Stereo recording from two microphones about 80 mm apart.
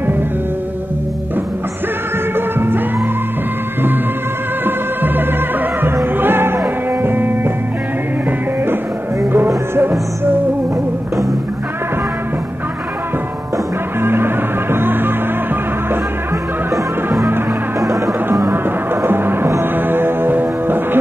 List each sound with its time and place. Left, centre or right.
2.3 s music: right
4.6 s music: right
9.8 s music: right
14.0 s music: right
17.7 s music: right
18.5 s music: right